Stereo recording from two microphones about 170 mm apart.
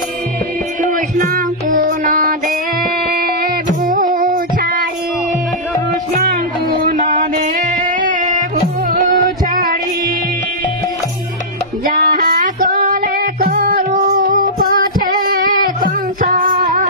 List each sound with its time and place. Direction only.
1.1 s music: 50° right (ahead or behind)
3.8 s female singing: 55° right (ahead or behind)
6.8 s music: 50° right (ahead or behind)
12.0 s music: 55° right (ahead or behind)